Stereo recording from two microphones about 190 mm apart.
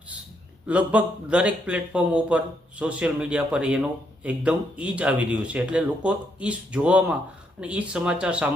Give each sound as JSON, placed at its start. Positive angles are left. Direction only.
{"t": 0.7, "sound": "speech", "side_deg": -5}